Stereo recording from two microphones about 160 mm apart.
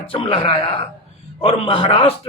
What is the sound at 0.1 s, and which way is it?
Speech, 35° left (ahead or behind).